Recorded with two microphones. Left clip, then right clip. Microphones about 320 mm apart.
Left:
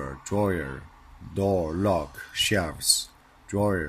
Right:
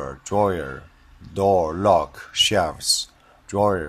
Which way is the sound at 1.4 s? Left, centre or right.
Right.